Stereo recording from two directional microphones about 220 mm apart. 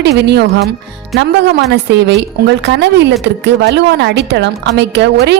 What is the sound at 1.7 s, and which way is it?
A woman's voice, 50° right (ahead or behind).